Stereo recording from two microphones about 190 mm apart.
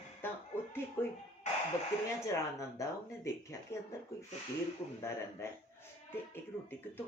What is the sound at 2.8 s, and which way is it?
Speech, 15° left (ahead or behind).